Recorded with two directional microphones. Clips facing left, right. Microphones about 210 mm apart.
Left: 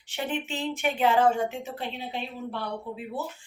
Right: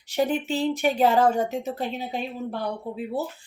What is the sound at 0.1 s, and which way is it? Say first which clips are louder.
Speech: right 7 dB; 40° right (ahead or behind).